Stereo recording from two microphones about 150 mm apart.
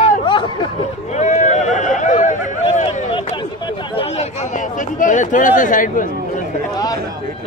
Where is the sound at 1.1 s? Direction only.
55° left (ahead or behind).